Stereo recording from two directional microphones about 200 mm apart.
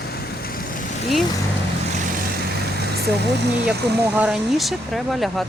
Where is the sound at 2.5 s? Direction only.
55° right (ahead or behind).